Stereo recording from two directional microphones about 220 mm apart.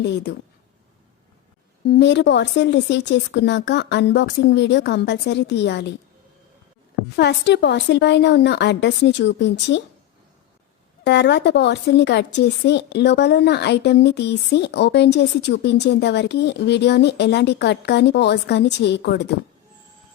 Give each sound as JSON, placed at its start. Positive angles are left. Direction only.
{"t": 0.0, "sound": "speech", "side_deg": 50}
{"t": 1.9, "sound": "speech", "side_deg": 50}
{"t": 7.2, "sound": "speech", "side_deg": 50}
{"t": 11.0, "sound": "speech", "side_deg": 50}